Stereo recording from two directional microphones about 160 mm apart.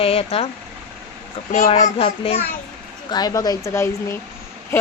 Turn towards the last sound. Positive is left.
turn(degrees=15)  # may be behind; listen again after turning